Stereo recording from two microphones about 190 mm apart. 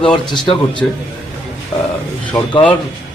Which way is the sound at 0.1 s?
25° left (ahead or behind).